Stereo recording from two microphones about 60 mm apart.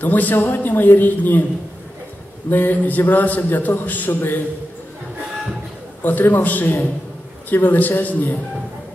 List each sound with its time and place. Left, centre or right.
0.0 s a man's voice: left
2.5 s a man's voice: left
6.0 s a man's voice: left